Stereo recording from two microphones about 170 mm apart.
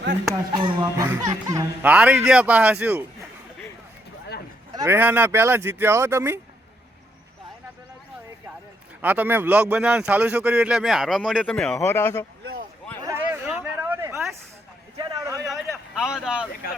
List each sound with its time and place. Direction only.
0.5 s speech: 25° right (ahead or behind)
1.9 s speech: 5° right (ahead or behind)
4.9 s speech: 10° right (ahead or behind)
9.0 s speech: 10° right (ahead or behind); by 12.1 s 15° left (ahead or behind)
13.0 s a sound: 15° right (ahead or behind)
16.0 s speech: 5° right (ahead or behind)